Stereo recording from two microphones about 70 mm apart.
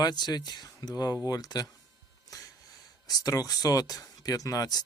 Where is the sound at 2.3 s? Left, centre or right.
Left.